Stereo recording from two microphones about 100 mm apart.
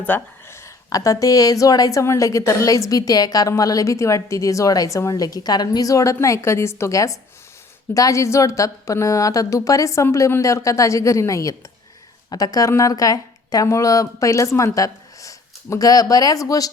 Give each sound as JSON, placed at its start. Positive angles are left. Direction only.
{"t": 0.0, "sound": "a woman's voice", "side_deg": 20}